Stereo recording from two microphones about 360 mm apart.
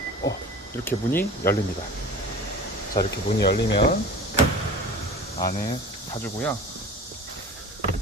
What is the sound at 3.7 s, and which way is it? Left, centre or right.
Speech, centre.